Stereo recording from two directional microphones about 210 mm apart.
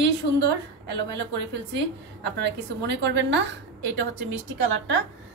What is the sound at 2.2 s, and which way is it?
A woman's voice, 55° right (ahead or behind).